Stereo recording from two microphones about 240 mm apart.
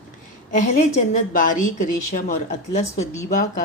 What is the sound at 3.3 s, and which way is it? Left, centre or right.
Speech, left.